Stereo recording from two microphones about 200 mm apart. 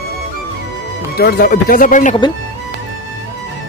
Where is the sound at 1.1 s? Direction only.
45° left (ahead or behind).